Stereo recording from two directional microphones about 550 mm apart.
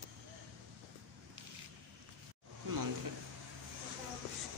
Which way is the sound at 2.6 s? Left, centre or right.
Right.